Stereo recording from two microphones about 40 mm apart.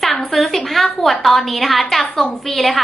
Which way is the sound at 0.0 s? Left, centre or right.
Centre.